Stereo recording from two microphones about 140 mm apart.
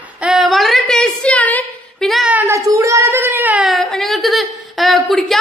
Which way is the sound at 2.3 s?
20° right (ahead or behind).